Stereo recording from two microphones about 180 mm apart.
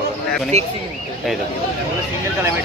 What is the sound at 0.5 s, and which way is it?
Speech, 40° right (ahead or behind).